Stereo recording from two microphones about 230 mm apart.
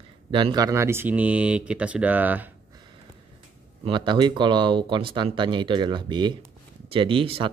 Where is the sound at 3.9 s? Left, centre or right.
Right.